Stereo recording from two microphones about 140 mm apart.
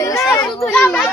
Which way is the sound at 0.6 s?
10° left (ahead or behind).